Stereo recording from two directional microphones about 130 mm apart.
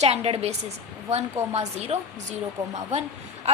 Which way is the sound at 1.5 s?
55° right (ahead or behind).